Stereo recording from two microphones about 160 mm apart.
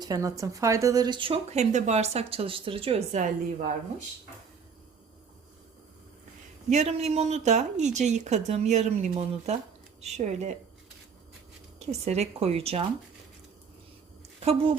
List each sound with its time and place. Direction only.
0.0 s speech: 20° right (ahead or behind); by 3.7 s 45° right (ahead or behind)
6.7 s speech: 45° right (ahead or behind)
11.8 s speech: 45° right (ahead or behind)
14.4 s speech: 35° right (ahead or behind)